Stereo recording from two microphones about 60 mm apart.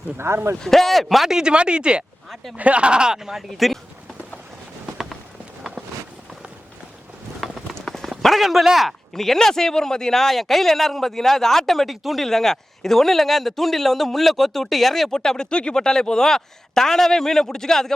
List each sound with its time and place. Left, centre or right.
0.2 s speech: right
0.6 s speech: centre
2.3 s speech: centre
2.6 s speech: right; by 3.8 s centre
7.4 s run: centre
7.8 s a sound: centre
8.2 s speech: centre